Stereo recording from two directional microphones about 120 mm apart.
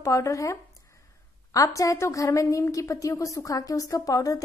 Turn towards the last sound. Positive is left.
turn(degrees=30)  # may be behind; listen again after turning